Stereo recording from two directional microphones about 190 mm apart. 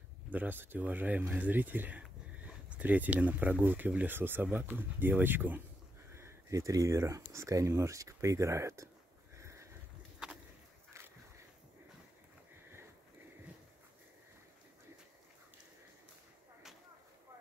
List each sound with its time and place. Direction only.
0.3 s speech: 10° right (ahead or behind)
9.4 s sniff: 15° right (ahead or behind)